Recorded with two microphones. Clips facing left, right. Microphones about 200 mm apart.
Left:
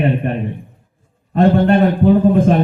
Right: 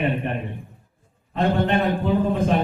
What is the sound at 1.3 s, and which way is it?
Speech, 45° left (ahead or behind).